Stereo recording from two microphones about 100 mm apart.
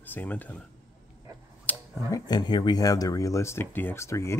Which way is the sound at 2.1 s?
45° left (ahead or behind).